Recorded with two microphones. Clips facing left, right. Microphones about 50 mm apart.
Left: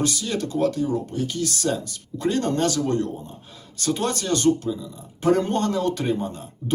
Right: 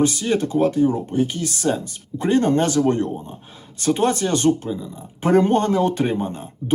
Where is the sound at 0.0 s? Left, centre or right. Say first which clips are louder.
Right 6 dB; right.